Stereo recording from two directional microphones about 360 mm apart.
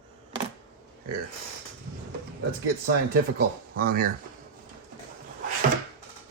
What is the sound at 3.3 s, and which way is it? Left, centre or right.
Speech, right.